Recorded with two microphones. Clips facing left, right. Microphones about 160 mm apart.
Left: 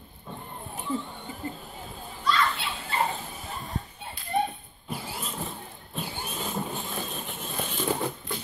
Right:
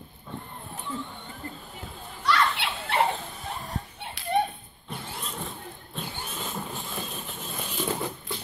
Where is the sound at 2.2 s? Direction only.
75° right (ahead or behind).